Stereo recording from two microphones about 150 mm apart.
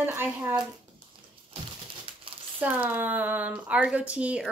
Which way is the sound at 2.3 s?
35° right (ahead or behind).